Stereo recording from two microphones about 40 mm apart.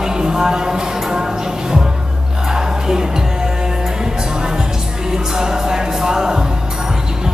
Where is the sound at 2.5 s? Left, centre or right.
Centre.